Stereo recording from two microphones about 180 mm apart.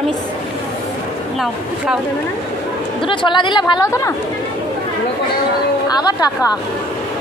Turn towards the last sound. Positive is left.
turn(degrees=20)  # may be behind; listen again after turning